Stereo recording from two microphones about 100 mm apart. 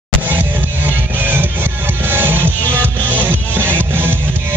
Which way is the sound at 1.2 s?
20° right (ahead or behind).